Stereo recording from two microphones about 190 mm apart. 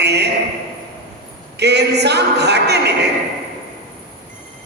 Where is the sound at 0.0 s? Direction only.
60° right (ahead or behind).